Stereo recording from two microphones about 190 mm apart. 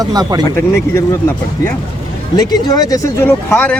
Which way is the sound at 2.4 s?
20° left (ahead or behind).